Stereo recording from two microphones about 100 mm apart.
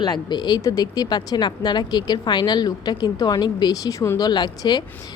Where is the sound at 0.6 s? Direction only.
40° left (ahead or behind).